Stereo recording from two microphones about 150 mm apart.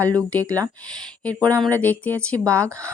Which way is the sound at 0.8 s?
5° left (ahead or behind).